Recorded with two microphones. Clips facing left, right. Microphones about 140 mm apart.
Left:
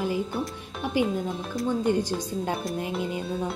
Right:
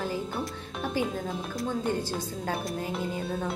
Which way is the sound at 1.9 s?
15° left (ahead or behind).